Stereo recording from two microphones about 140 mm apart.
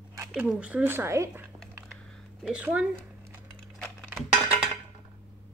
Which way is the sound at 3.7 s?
10° left (ahead or behind).